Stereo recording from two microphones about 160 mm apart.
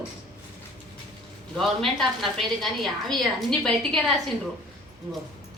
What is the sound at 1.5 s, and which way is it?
A woman's voice, centre (ahead or behind).